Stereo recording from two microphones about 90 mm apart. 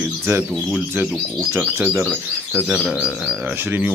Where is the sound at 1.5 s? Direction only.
25° right (ahead or behind).